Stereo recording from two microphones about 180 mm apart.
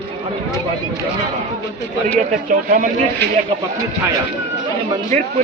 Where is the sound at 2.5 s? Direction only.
45° right (ahead or behind).